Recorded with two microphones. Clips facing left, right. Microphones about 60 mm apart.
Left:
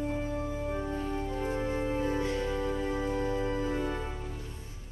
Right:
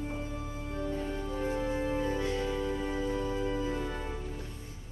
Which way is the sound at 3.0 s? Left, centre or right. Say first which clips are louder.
Left 1 dB; left.